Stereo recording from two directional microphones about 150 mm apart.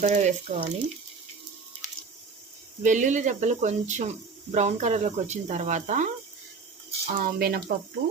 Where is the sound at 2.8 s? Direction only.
55° right (ahead or behind).